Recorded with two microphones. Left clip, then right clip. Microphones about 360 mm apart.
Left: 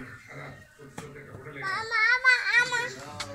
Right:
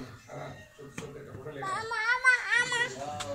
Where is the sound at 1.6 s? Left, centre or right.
Centre.